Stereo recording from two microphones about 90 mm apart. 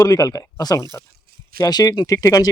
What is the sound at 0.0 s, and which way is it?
Speech, 45° left (ahead or behind).